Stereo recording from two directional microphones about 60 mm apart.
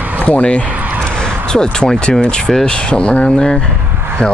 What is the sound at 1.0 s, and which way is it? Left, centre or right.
Speech, centre.